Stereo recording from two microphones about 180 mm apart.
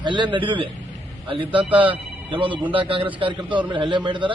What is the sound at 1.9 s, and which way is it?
A man's voice, 30° right (ahead or behind).